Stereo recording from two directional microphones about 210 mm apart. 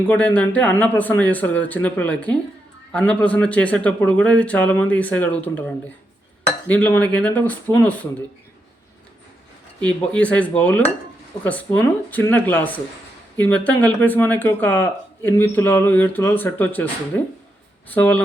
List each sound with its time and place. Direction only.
0.0 s speech: 5° left (ahead or behind)
9.8 s speech: 5° left (ahead or behind)
17.9 s speech: 5° left (ahead or behind)